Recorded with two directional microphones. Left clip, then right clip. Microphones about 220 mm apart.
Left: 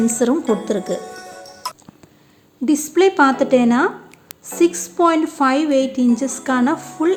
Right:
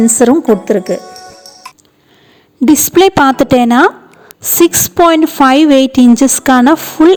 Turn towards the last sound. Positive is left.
turn(degrees=-40)  # may be behind; listen again after turning